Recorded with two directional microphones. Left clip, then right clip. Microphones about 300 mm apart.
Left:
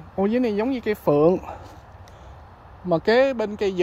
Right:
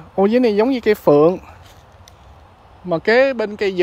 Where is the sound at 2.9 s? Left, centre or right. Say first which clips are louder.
Right 4 dB; centre.